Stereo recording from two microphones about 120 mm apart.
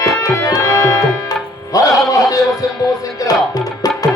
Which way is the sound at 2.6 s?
30° left (ahead or behind).